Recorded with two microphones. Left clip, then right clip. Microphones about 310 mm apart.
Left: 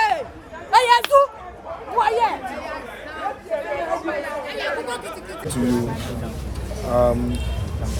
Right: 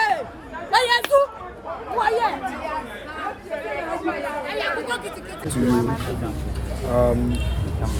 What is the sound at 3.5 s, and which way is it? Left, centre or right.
Chatter, left.